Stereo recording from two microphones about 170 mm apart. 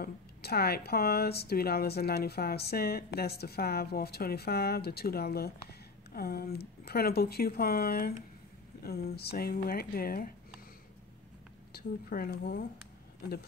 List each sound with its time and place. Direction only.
0.0 s speech: 70° left (ahead or behind)
11.7 s speech: 60° left (ahead or behind)